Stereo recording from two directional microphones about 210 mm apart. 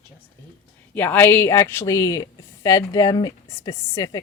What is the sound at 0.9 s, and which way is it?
Speech, 10° left (ahead or behind).